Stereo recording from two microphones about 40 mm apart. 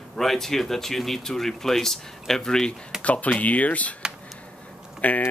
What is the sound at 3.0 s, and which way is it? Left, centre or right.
Speech, left.